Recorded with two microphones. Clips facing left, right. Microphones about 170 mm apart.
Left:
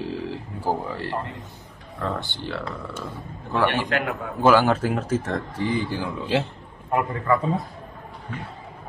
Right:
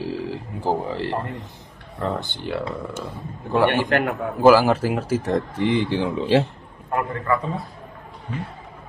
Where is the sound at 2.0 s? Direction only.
20° right (ahead or behind).